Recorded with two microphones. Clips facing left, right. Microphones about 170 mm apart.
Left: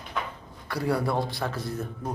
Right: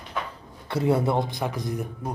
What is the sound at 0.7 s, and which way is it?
Speech, 25° right (ahead or behind).